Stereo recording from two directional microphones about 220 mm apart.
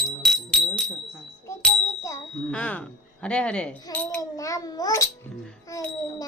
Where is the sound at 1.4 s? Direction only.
10° left (ahead or behind).